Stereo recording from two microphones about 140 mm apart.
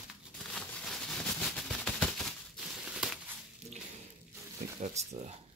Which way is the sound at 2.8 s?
5° right (ahead or behind).